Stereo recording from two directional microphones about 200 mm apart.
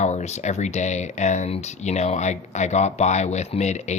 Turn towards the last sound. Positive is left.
turn(degrees=35)  # may be behind; listen again after turning